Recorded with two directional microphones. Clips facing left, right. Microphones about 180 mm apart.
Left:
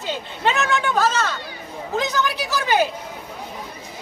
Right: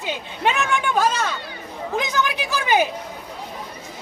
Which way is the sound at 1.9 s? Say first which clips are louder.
Left 1 dB; 15° right (ahead or behind).